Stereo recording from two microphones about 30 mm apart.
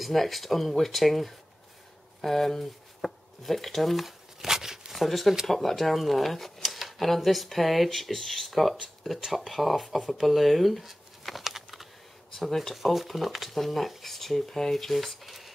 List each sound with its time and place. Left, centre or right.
0.0 s speech: centre
4.5 s a sound: centre
4.9 s speech: centre
6.6 s a sound: centre
7.2 s speech: centre
11.3 s typing: centre
12.4 s speech: centre
12.7 s speech: centre